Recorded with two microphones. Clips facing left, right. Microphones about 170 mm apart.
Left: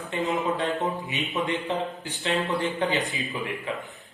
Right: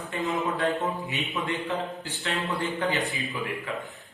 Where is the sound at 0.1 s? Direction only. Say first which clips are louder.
Left 2 dB; 20° left (ahead or behind).